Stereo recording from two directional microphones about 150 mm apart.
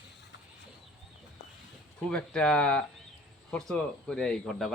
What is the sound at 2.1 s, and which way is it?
A man's voice, 5° left (ahead or behind).